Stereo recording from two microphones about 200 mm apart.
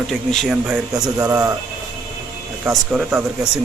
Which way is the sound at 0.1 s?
Centre (ahead or behind).